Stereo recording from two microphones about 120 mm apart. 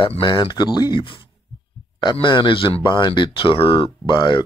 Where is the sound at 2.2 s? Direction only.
40° left (ahead or behind).